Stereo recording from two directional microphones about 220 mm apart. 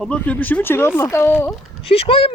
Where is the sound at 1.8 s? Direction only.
25° left (ahead or behind).